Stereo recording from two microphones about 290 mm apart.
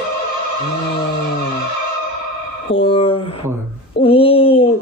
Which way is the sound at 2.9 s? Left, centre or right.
Centre.